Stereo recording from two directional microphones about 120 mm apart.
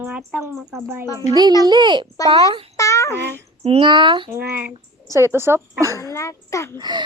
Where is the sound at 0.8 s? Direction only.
20° right (ahead or behind).